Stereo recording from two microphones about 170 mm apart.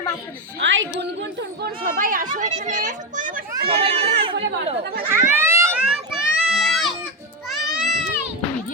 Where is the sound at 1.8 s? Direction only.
55° right (ahead or behind); by 4.7 s 35° right (ahead or behind).